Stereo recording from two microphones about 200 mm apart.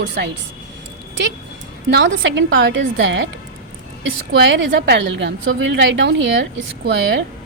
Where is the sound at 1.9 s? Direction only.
65° right (ahead or behind).